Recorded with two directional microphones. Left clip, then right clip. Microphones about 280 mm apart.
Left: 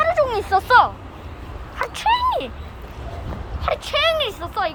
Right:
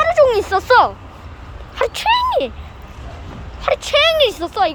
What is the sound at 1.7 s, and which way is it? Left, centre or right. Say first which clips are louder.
Speech: right 4 dB; centre.